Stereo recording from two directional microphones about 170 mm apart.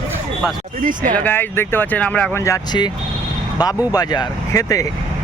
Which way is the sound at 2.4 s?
20° left (ahead or behind).